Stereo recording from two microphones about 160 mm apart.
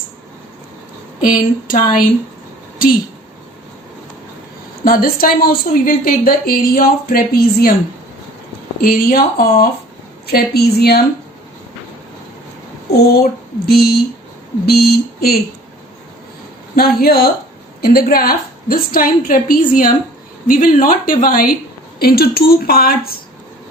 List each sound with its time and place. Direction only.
1.2 s a woman's voice: 60° left (ahead or behind)
4.9 s a woman's voice: 65° left (ahead or behind)
8.8 s a woman's voice: 65° left (ahead or behind)
10.2 s speech: 80° left
12.9 s a woman's voice: 80° left
16.7 s a woman's voice: 75° left (ahead or behind)
21.9 s a woman's voice: 75° left (ahead or behind)